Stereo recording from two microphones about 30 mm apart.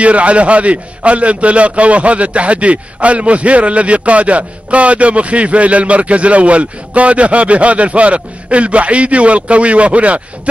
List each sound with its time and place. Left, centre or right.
0.0 s a man's voice: right